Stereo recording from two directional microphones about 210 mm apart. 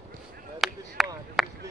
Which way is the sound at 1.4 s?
Centre (ahead or behind).